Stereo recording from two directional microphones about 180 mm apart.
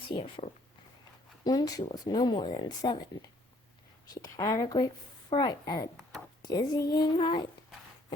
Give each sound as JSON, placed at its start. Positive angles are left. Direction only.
{"t": 0.2, "sound": "speech", "side_deg": 30}
{"t": 6.0, "sound": "a sound", "side_deg": 0}
{"t": 6.4, "sound": "speech", "side_deg": 20}